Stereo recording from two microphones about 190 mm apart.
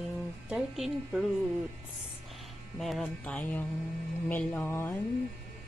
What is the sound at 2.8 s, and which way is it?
A woman's voice, centre (ahead or behind).